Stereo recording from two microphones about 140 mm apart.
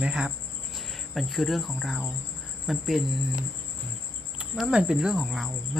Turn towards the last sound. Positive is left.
turn(degrees=0)  # may be behind; listen again after turning